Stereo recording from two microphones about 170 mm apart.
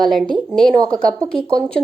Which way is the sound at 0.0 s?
Centre (ahead or behind).